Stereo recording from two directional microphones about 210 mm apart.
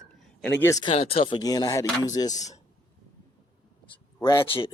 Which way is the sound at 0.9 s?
25° left (ahead or behind).